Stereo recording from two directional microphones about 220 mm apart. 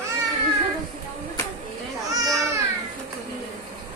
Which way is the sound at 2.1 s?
15° right (ahead or behind).